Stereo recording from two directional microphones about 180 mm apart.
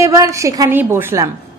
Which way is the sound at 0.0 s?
20° right (ahead or behind).